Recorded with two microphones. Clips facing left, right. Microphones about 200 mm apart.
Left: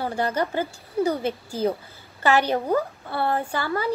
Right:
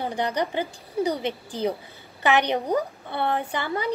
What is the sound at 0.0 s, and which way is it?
A woman's voice, 15° right (ahead or behind).